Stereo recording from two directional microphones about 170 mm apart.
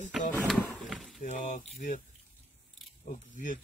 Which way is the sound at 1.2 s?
50° left (ahead or behind).